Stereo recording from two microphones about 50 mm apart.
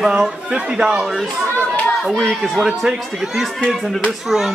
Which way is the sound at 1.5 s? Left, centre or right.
Left.